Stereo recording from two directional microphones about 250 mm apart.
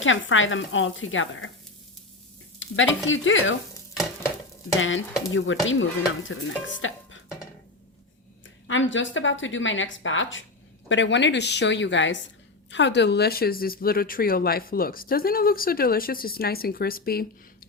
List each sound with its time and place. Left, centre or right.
0.0 s speech: left
2.6 s speech: left
4.8 s speech: left
8.6 s speech: left